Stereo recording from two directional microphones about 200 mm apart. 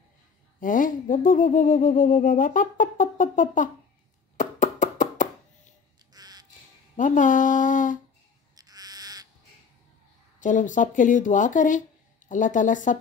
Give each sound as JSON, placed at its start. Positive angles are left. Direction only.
{"t": 0.6, "sound": "speech", "side_deg": 40}
{"t": 4.4, "sound": "chopping", "side_deg": 40}
{"t": 6.1, "sound": "crow", "side_deg": -20}
{"t": 7.0, "sound": "speech", "side_deg": 40}
{"t": 8.5, "sound": "crow", "side_deg": -20}
{"t": 10.4, "sound": "speech", "side_deg": 40}